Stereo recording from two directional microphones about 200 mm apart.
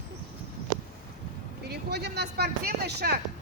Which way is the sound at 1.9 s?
55° right (ahead or behind).